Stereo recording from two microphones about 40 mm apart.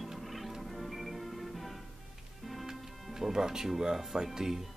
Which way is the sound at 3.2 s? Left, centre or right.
Centre.